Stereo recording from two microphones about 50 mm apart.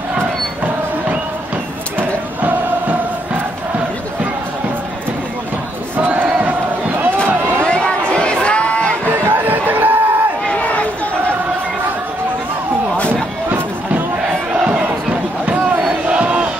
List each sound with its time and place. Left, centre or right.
2.0 s crowd: right
5.9 s crowd: right
7.6 s a sound: left
9.2 s a sound: right
10.5 s run: left
16.1 s crowd: right